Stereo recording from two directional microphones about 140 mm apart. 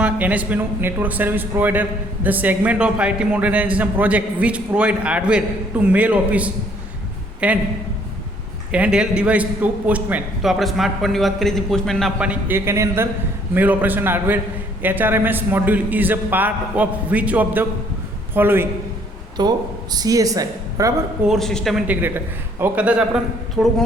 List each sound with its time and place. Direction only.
0.0 s a man's voice: 10° right (ahead or behind)
8.7 s a man's voice: 10° right (ahead or behind)
12.2 s a man's voice: 10° right (ahead or behind)
19.4 s speech: 30° right (ahead or behind)
21.2 s a man's voice: centre (ahead or behind)
21.8 s a man's voice: 15° right (ahead or behind)